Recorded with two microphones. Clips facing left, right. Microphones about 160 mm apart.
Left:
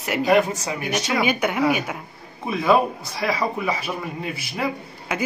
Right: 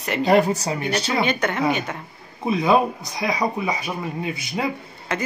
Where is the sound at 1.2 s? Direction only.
10° left (ahead or behind).